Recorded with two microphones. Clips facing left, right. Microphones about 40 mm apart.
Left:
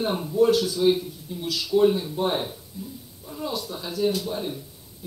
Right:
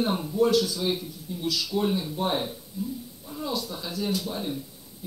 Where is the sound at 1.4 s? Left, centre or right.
Left.